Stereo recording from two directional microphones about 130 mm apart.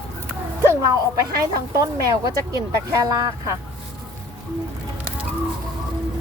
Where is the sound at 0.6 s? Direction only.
25° right (ahead or behind).